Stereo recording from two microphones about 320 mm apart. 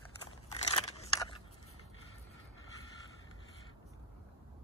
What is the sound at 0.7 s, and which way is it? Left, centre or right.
Biting, centre.